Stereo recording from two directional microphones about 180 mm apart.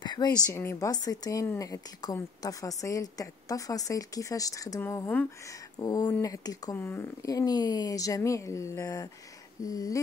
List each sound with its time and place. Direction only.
0.0 s a woman's voice: 25° left (ahead or behind)